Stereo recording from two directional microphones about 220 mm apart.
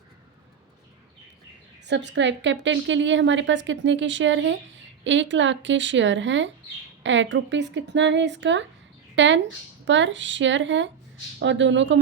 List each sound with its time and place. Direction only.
1.9 s a woman's voice: 50° right (ahead or behind)